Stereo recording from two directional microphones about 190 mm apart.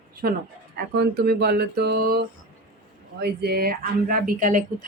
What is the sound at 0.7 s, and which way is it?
Speech, 60° right (ahead or behind).